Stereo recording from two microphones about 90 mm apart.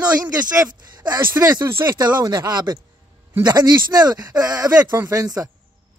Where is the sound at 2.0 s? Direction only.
50° right (ahead or behind).